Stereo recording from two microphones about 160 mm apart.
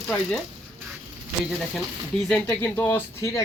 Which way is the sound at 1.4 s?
Centre (ahead or behind).